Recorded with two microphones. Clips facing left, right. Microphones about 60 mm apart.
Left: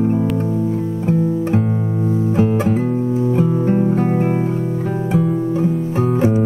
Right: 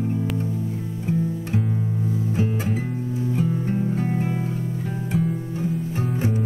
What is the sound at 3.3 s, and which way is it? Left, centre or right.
Guitar, left.